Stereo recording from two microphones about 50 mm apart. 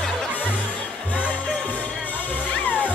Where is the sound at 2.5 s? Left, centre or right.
Left.